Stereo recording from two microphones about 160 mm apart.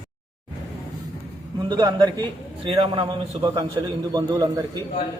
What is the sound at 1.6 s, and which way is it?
A man's voice, 25° right (ahead or behind).